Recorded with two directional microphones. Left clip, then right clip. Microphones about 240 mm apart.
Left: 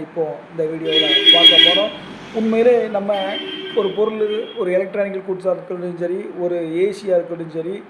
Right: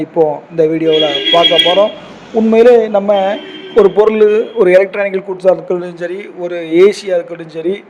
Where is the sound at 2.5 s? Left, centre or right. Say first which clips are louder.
Right 8 dB; right.